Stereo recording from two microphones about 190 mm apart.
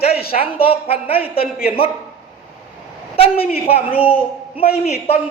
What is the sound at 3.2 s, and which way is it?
Speech, 30° left (ahead or behind).